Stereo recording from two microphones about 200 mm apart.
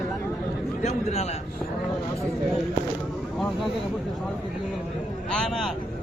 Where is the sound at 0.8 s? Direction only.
35° left (ahead or behind).